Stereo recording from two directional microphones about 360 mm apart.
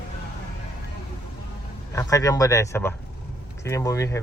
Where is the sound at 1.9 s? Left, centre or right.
Centre.